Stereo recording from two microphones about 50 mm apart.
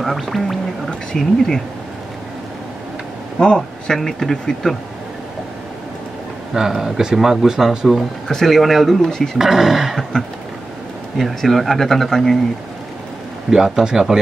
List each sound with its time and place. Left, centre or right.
0.0 s speech: centre
3.3 s speech: centre
6.5 s speech: centre
8.3 s speech: centre
9.4 s speech: centre
10.1 s speech: centre
11.1 s speech: centre
13.7 s speech: centre